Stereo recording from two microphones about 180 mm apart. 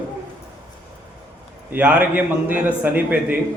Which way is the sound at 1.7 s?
10° right (ahead or behind).